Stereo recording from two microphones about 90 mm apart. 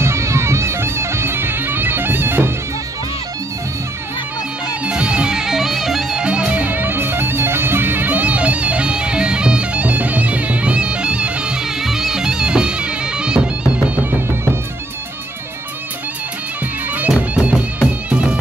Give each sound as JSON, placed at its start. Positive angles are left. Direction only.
{"t": 0.0, "sound": "music", "side_deg": -30}
{"t": 4.8, "sound": "music", "side_deg": -10}
{"t": 17.1, "sound": "music", "side_deg": -10}